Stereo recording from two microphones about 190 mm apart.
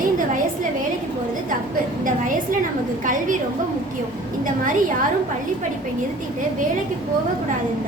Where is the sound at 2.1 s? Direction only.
45° right (ahead or behind).